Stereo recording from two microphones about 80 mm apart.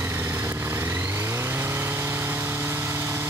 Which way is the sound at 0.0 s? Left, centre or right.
Right.